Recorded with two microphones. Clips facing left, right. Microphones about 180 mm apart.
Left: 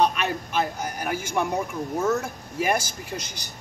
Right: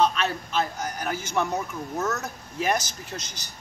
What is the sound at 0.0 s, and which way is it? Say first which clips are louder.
A man's voice: left 1 dB; 15° left (ahead or behind).